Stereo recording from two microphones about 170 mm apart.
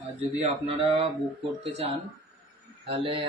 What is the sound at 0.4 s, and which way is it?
Speech, 35° right (ahead or behind).